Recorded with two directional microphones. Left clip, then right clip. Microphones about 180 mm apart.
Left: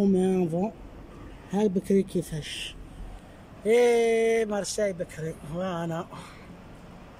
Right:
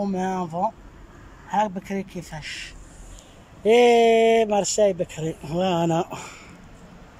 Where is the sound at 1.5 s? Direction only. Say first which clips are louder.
Right 1 dB; 10° left (ahead or behind).